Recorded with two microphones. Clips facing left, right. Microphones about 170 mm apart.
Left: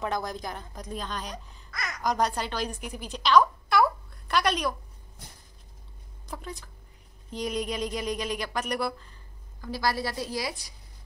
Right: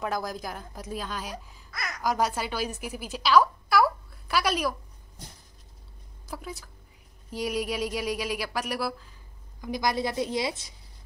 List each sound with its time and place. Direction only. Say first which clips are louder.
0.0 s speech: even; centre (ahead or behind)
6.2 s a woman's voice: right 1 dB; 5° right (ahead or behind)
9.6 s a woman's voice: right 2 dB; 20° right (ahead or behind)